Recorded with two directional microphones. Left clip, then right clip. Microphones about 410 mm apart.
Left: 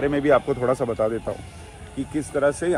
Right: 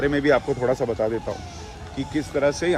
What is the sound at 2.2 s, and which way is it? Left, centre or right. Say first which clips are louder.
Speech: even; centre.